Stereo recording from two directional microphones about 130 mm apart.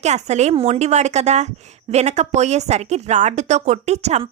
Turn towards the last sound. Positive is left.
turn(degrees=-60)  # may be behind; listen again after turning